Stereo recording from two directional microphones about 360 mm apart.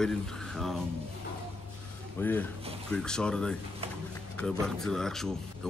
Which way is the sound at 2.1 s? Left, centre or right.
Centre.